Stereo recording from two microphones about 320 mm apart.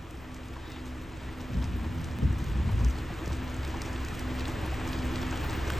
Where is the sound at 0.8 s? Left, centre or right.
Centre.